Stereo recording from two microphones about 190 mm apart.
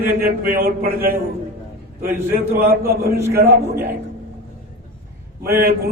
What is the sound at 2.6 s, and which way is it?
Speech, 55° right (ahead or behind).